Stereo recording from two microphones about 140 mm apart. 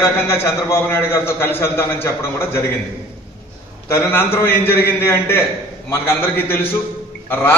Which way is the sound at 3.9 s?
15° left (ahead or behind).